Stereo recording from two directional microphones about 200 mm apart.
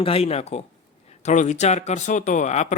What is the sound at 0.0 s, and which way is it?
Speech, 30° left (ahead or behind).